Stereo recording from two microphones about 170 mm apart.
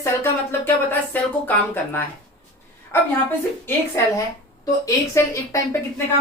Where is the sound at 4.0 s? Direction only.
15° left (ahead or behind).